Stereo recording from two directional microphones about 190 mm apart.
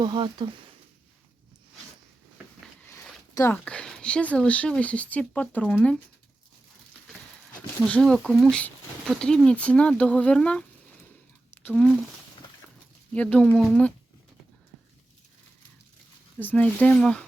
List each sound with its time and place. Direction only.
0.0 s speech: 25° right (ahead or behind)
2.8 s speech: 10° left (ahead or behind)
7.9 s speech: 5° left (ahead or behind)
13.1 s speech: 5° left (ahead or behind)
16.4 s speech: 10° left (ahead or behind)